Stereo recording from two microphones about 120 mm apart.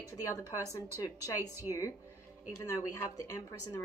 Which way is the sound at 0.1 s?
25° left (ahead or behind).